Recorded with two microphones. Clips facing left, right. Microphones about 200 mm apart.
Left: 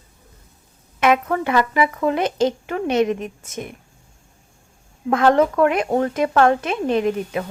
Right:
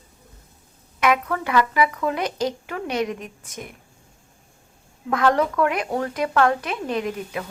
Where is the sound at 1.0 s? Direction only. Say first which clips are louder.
Left 4 dB; 25° left (ahead or behind).